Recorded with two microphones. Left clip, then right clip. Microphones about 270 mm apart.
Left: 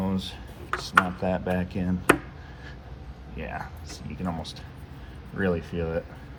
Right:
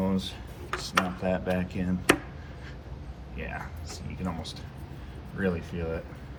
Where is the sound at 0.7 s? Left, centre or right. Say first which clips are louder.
Left 6 dB; centre.